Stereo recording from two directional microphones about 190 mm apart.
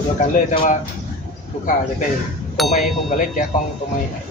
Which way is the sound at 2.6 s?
Centre (ahead or behind).